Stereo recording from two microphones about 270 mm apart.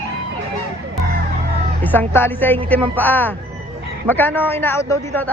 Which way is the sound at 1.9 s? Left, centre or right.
Centre.